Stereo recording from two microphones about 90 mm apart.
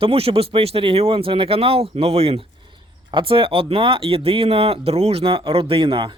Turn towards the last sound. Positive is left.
turn(degrees=-80)